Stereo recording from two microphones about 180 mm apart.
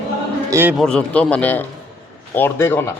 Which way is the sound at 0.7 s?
5° left (ahead or behind).